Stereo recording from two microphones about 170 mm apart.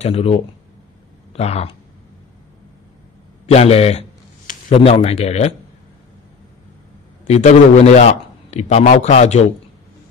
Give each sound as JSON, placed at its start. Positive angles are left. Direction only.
{"t": 0.0, "sound": "a man's voice", "side_deg": 35}
{"t": 3.4, "sound": "a man's voice", "side_deg": 35}
{"t": 7.2, "sound": "a man's voice", "side_deg": 40}